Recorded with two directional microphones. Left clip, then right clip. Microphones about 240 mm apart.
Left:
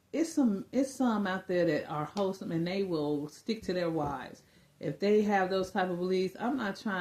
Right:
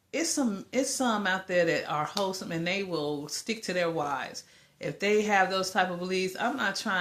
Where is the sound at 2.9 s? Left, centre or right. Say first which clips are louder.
Right 1 dB; right.